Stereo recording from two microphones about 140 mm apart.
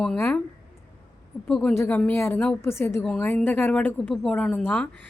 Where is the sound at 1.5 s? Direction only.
5° left (ahead or behind).